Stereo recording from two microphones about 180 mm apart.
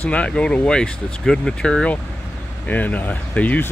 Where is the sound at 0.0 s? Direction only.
5° left (ahead or behind).